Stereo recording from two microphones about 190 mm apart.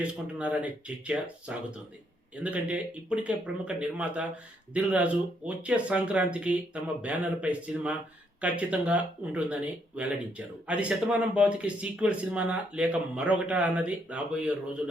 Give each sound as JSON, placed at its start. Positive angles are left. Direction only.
{"t": 0.0, "sound": "speech", "side_deg": -5}